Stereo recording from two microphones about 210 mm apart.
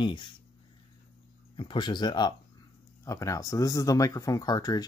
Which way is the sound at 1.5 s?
20° left (ahead or behind).